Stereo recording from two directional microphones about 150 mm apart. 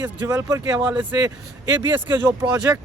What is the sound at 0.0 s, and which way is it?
Speech, 15° right (ahead or behind).